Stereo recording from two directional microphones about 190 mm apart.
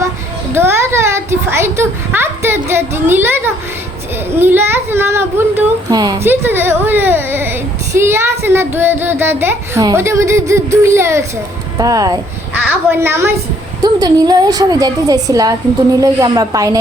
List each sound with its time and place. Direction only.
0.5 s a woman's voice: 15° right (ahead or behind)